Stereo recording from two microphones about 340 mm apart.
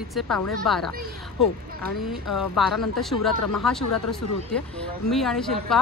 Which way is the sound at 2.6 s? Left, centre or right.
Centre.